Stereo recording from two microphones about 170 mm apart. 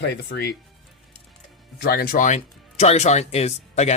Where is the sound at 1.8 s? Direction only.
60° left (ahead or behind).